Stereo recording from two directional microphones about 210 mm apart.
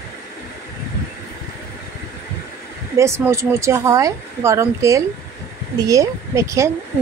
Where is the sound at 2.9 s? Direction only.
15° right (ahead or behind).